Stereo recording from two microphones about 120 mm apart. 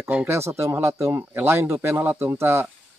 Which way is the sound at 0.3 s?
25° right (ahead or behind).